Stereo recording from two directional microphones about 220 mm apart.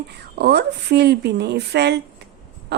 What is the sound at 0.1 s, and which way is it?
A woman's voice, 50° right (ahead or behind).